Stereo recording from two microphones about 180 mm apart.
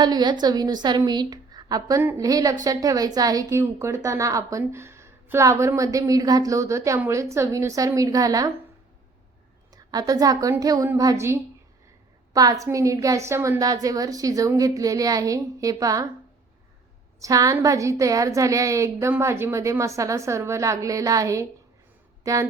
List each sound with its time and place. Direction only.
0.0 s a woman's voice: 25° right (ahead or behind)
9.7 s a woman's voice: 20° right (ahead or behind)
17.2 s a woman's voice: 20° right (ahead or behind)